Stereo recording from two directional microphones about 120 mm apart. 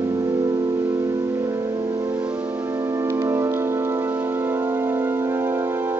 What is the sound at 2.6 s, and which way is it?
Music, 25° right (ahead or behind).